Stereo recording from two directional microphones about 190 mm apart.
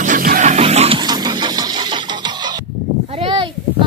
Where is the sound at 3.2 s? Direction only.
25° right (ahead or behind).